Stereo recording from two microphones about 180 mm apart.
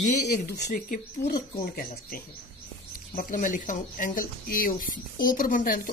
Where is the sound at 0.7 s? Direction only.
50° left (ahead or behind).